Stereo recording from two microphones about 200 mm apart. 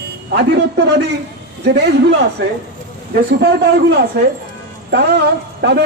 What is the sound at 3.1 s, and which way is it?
Speech, 55° right (ahead or behind).